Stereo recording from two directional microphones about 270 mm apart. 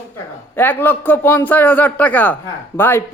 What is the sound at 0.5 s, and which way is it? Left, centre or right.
A man's voice, centre.